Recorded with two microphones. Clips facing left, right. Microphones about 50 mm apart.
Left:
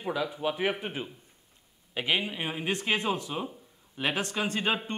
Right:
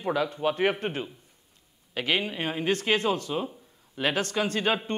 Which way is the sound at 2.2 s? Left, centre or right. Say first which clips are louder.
Right 3 dB; centre.